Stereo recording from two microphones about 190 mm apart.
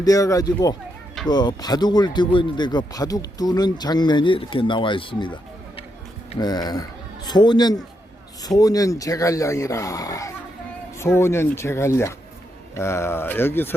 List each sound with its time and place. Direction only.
0.0 s speech: 20° left (ahead or behind)